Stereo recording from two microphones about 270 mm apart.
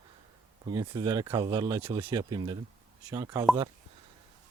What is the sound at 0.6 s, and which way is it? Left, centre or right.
Speech, centre.